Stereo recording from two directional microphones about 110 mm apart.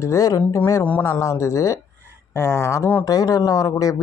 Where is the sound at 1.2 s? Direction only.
25° left (ahead or behind).